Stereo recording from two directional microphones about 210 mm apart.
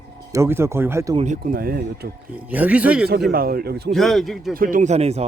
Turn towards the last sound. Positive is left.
turn(degrees=-30)  # may be behind; listen again after turning